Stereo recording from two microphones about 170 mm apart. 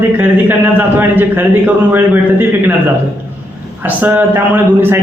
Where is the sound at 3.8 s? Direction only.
10° right (ahead or behind).